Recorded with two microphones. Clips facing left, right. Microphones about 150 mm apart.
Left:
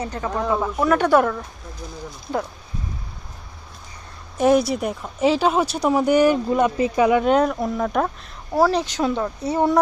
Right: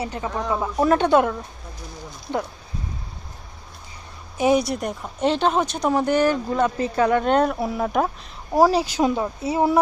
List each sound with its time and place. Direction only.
0.0 s speech: 15° right (ahead or behind)
4.4 s speech: centre (ahead or behind)